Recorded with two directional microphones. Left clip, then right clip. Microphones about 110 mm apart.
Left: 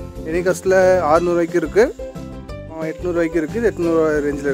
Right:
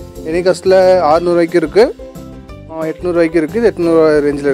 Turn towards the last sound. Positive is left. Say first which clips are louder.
# right 7 dB
turn(degrees=-30)  # may be behind; listen again after turning